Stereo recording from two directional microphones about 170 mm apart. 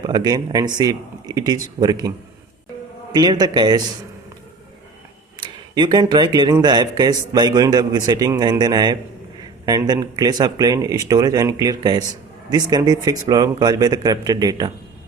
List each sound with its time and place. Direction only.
0.0 s a man's voice: 25° right (ahead or behind)
5.7 s a man's voice: 25° right (ahead or behind)